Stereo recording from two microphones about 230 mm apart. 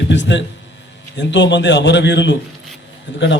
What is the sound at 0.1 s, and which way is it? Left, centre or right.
A man's voice, left.